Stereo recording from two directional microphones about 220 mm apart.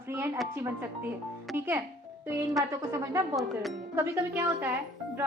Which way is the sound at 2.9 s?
15° right (ahead or behind).